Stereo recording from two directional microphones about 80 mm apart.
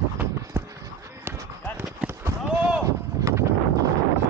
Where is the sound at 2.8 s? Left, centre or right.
Right.